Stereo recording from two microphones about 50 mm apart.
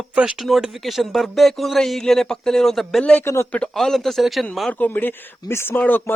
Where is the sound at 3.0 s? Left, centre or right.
Left.